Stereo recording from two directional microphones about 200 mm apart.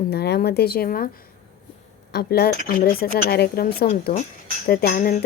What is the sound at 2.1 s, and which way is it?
Speech, 50° left (ahead or behind).